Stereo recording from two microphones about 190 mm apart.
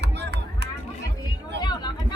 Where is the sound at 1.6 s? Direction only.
20° left (ahead or behind).